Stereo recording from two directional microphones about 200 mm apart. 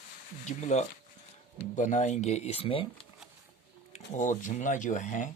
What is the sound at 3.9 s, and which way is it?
Speech, 40° left (ahead or behind).